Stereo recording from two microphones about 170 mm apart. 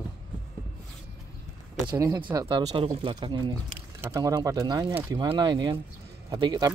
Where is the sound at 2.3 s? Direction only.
25° right (ahead or behind).